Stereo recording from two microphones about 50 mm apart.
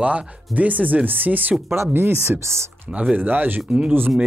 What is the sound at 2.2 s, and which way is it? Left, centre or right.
Speech, right.